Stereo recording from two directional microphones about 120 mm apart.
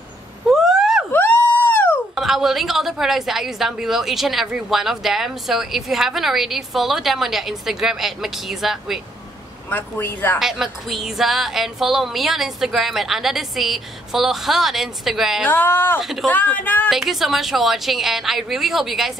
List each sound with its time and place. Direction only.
0.5 s a sound: 5° right (ahead or behind)
1.1 s a sound: 15° left (ahead or behind)
2.1 s a woman's voice: centre (ahead or behind)
9.7 s speech: 15° left (ahead or behind)
10.4 s a woman's voice: 5° right (ahead or behind)
15.4 s speech: 15° left (ahead or behind)
16.0 s a woman's voice: centre (ahead or behind)
16.3 s speech: 15° left (ahead or behind)
16.9 s a woman's voice: centre (ahead or behind)